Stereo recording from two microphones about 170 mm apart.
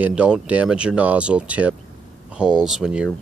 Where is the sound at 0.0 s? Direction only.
5° right (ahead or behind).